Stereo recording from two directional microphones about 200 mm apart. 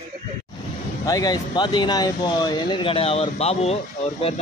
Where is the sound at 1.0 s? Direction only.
20° left (ahead or behind).